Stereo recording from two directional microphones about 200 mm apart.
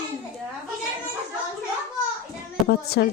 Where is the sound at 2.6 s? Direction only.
55° left (ahead or behind).